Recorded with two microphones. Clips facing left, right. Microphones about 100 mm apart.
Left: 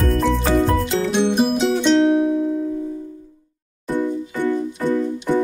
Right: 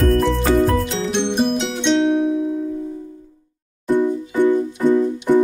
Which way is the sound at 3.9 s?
15° right (ahead or behind).